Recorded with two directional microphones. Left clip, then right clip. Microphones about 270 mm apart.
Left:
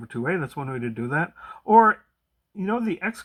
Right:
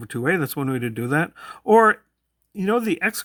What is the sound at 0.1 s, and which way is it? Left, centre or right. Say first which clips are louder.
Speech: right 5 dB; right.